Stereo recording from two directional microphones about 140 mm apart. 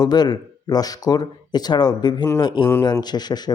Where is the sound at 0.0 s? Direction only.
30° left (ahead or behind).